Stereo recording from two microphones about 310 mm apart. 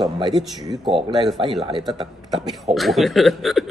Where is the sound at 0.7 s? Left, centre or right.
Centre.